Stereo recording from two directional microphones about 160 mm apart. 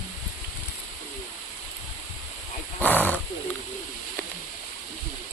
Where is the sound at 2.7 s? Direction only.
10° left (ahead or behind).